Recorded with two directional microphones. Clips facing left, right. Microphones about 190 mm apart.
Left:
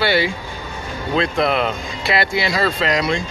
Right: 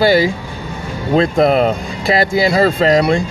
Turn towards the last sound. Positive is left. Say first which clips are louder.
# right 7 dB
turn(degrees=-40)  # may be behind; listen again after turning